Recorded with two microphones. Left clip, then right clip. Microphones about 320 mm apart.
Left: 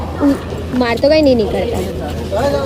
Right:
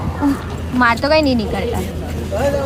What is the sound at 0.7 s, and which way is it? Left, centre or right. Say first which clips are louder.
Speech: left 1 dB; right.